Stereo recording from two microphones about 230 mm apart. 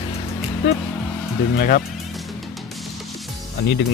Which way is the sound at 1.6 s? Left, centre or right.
Left.